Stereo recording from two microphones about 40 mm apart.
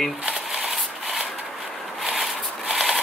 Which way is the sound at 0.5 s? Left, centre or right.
Centre.